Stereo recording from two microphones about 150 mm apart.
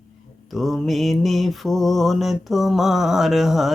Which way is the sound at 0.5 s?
Centre (ahead or behind).